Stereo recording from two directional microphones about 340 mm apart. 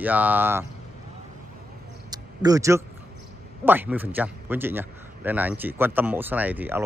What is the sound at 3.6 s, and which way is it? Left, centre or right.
Speech, centre.